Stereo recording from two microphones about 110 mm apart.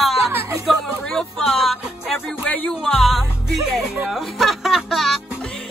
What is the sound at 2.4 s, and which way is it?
Music, 15° left (ahead or behind).